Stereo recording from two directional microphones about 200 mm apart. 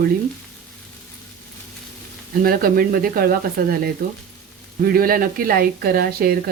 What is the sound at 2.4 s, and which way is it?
A woman's voice, 45° right (ahead or behind).